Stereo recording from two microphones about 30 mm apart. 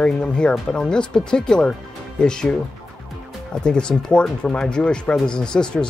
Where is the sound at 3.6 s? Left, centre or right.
Left.